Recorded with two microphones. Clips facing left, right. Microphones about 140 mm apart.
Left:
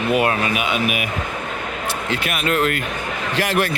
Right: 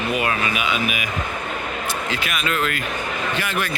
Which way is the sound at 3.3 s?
90° left.